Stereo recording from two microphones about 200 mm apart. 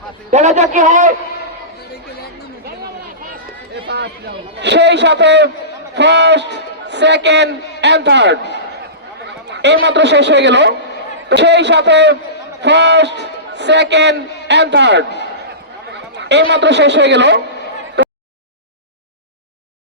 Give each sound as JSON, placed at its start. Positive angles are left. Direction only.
{"t": 0.3, "sound": "a man's voice", "side_deg": -35}
{"t": 3.8, "sound": "chatter", "side_deg": -60}
{"t": 4.6, "sound": "a man's voice", "side_deg": -60}
{"t": 16.1, "sound": "a man's voice", "side_deg": -60}
{"t": 18.0, "sound": "a sound", "side_deg": -60}